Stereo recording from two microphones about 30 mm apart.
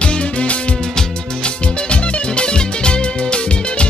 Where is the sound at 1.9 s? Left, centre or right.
Left.